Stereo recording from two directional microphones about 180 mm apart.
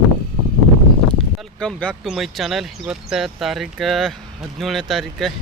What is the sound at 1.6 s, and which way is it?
Speech, 5° left (ahead or behind).